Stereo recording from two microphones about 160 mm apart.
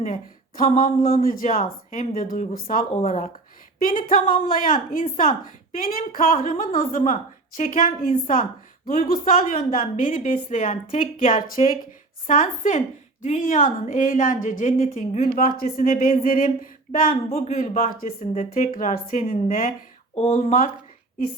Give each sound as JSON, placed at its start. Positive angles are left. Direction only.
{"t": 0.0, "sound": "speech", "side_deg": 50}
{"t": 0.8, "sound": "a woman's voice", "side_deg": 60}
{"t": 2.9, "sound": "speech", "side_deg": 45}
{"t": 3.8, "sound": "a woman's voice", "side_deg": 60}
{"t": 17.2, "sound": "speech", "side_deg": 45}
{"t": 20.1, "sound": "speech", "side_deg": 40}